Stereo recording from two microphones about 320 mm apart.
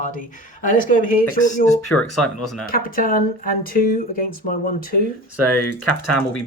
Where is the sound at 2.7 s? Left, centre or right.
Left.